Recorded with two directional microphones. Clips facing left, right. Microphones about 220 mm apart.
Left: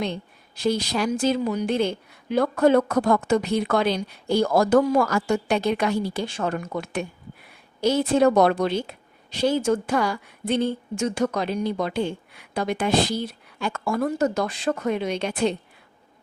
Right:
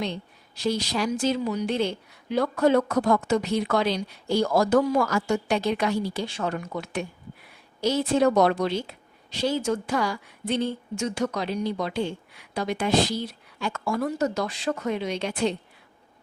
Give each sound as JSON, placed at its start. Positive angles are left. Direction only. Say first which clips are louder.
{"t": 0.0, "sound": "a woman's voice", "louder": "left 2 dB", "side_deg": 50}